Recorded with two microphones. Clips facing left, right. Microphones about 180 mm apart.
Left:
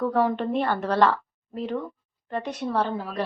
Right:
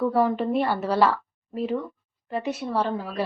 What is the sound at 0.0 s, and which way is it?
A woman's voice, 5° right (ahead or behind).